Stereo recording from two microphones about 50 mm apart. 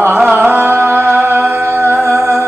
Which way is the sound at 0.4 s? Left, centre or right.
Right.